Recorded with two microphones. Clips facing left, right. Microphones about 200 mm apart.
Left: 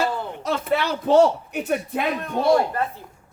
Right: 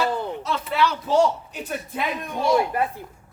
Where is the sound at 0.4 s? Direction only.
50° left (ahead or behind).